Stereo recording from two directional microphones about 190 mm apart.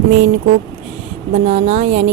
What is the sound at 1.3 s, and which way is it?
Speech, 35° right (ahead or behind).